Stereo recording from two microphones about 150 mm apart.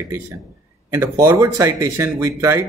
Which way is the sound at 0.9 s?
15° right (ahead or behind).